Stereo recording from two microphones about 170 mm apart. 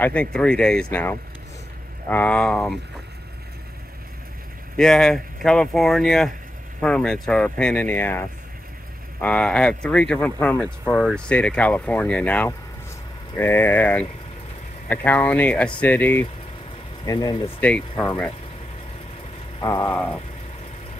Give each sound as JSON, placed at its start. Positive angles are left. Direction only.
{"t": 0.0, "sound": "speech", "side_deg": 10}
{"t": 4.7, "sound": "speech", "side_deg": 5}
{"t": 17.0, "sound": "speech", "side_deg": 20}
{"t": 17.6, "sound": "speech", "side_deg": 5}
{"t": 19.6, "sound": "speech", "side_deg": 20}